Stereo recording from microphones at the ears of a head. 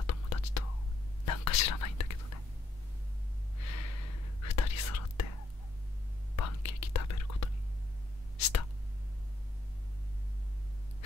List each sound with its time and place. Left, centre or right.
0.0 s whispering: left
3.5 s whispering: left